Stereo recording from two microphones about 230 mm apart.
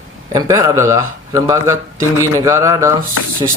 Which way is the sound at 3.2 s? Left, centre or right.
Left.